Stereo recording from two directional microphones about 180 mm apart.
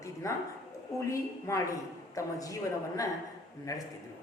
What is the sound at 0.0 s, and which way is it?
Bow-wow, 15° left (ahead or behind).